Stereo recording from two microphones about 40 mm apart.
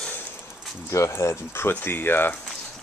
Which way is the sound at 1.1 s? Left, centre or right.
Left.